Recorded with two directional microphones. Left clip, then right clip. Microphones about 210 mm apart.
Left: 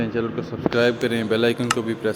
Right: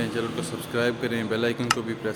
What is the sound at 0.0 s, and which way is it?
Speech, 10° left (ahead or behind).